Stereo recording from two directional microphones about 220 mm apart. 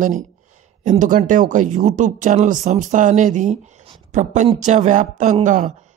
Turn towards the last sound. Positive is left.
turn(degrees=-35)  # may be behind; listen again after turning